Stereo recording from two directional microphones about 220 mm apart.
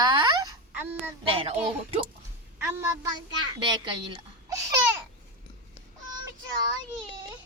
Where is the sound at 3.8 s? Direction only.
20° right (ahead or behind).